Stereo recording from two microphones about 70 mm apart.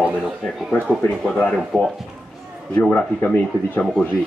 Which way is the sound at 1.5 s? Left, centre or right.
Centre.